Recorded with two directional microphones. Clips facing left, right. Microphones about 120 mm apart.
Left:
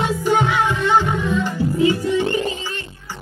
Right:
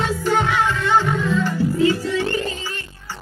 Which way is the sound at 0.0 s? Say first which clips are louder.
Left 2 dB; 15° left (ahead or behind).